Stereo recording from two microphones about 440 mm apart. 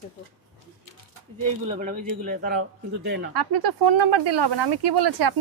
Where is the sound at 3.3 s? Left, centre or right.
Right.